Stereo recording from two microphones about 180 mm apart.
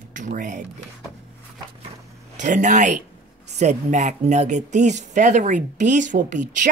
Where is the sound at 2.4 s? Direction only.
45° right (ahead or behind).